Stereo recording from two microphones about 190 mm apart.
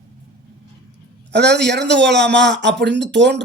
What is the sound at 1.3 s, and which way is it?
A man's voice, 60° right (ahead or behind).